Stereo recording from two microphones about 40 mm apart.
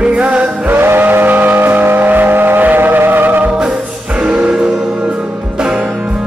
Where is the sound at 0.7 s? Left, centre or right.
Right.